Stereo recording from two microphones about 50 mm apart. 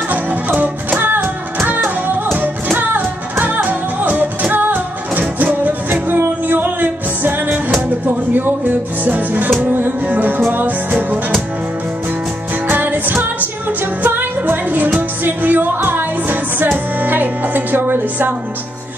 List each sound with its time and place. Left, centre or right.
0.1 s music: right
12.6 s music: right
16.7 s speech: right